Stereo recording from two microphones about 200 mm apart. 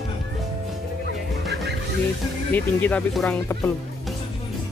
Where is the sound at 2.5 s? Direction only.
5° left (ahead or behind).